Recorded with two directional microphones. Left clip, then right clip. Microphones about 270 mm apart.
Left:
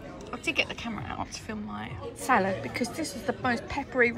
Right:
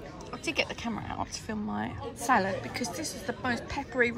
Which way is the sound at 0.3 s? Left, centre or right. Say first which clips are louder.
Left 2 dB; centre.